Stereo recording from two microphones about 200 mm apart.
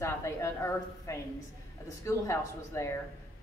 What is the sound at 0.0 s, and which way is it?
A woman's voice, 15° left (ahead or behind).